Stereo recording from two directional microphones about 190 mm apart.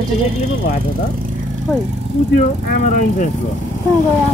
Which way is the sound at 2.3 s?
40° left (ahead or behind).